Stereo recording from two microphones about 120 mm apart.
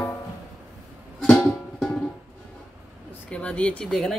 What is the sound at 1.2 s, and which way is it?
Music, 15° left (ahead or behind).